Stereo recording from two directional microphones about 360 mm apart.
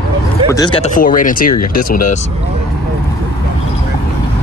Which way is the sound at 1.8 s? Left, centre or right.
Left.